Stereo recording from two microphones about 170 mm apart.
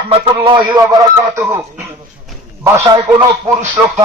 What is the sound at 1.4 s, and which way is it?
Speech, 15° right (ahead or behind).